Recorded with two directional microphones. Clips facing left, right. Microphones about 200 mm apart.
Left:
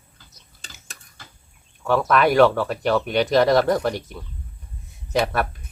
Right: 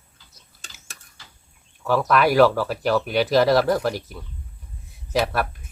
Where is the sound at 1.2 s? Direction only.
50° left (ahead or behind).